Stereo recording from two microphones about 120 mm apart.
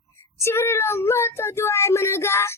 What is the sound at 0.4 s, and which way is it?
Speech, 20° left (ahead or behind).